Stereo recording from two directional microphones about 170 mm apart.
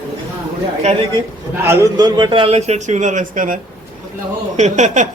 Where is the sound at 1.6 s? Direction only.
15° right (ahead or behind); by 3.6 s 50° right (ahead or behind).